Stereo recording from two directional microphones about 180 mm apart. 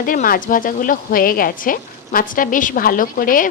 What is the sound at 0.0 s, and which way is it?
Speech, 50° left (ahead or behind).